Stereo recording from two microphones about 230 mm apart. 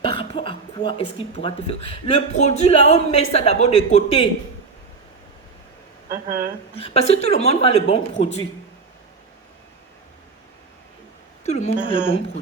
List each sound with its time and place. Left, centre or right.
0.0 s speech: left
6.1 s speech: right
6.7 s speech: left
11.4 s speech: left